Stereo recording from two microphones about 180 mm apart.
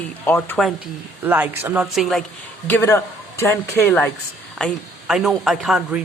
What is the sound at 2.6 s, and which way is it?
Speech, 15° left (ahead or behind).